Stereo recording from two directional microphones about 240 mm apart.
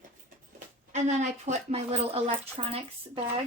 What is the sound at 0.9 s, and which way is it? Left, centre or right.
A woman's voice, right.